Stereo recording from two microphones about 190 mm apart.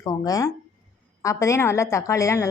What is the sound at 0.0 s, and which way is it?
Speech, 20° left (ahead or behind).